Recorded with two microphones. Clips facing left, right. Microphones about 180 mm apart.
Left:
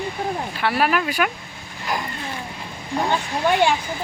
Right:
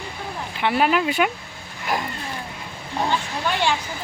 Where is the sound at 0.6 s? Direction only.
20° right (ahead or behind).